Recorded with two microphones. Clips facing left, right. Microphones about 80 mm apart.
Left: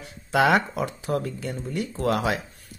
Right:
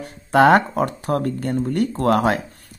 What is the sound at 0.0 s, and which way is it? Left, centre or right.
Speech, right.